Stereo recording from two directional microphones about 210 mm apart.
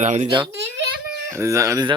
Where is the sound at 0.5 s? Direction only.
60° right (ahead or behind).